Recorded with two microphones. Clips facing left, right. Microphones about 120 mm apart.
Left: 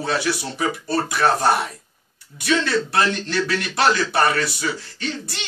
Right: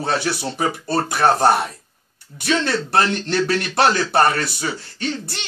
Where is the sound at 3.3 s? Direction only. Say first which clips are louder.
Right 3 dB; 50° right (ahead or behind).